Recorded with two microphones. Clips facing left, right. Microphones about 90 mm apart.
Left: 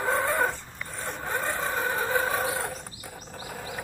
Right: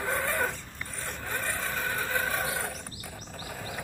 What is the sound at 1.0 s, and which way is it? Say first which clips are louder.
Vehicle: left 4 dB; 20° left (ahead or behind).